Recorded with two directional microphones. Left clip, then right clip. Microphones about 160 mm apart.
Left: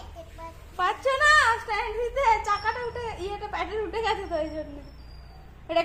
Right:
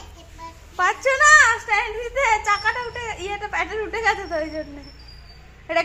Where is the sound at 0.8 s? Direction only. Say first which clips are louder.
Right 6 dB; 30° right (ahead or behind).